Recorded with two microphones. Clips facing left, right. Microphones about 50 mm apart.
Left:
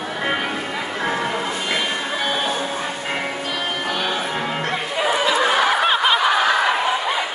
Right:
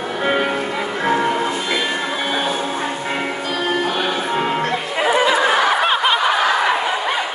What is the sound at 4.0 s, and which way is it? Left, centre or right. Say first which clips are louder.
Music: right 3 dB; right.